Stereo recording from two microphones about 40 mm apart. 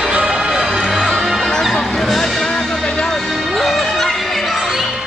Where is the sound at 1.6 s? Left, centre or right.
Centre.